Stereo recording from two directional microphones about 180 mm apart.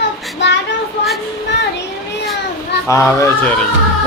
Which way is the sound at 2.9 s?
15° left (ahead or behind).